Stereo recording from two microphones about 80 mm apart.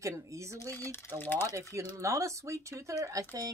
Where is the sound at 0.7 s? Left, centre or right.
Left.